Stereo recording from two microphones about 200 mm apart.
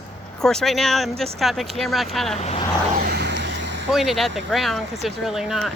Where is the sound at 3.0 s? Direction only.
55° right (ahead or behind).